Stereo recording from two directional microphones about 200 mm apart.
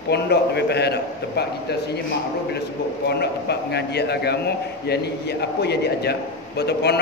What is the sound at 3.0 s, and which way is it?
A man's voice, 55° left (ahead or behind).